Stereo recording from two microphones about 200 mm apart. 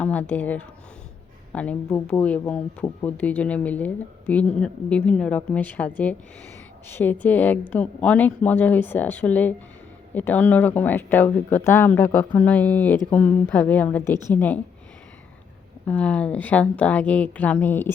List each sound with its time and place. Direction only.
0.0 s a woman's voice: 5° left (ahead or behind)
15.9 s speech: 5° left (ahead or behind)